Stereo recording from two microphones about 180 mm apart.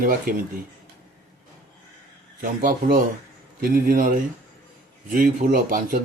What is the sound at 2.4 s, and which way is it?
Speech, 50° right (ahead or behind).